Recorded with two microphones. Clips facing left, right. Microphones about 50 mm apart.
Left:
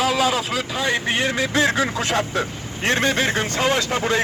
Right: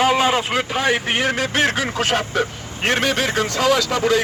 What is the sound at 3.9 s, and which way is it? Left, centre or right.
Speech, right.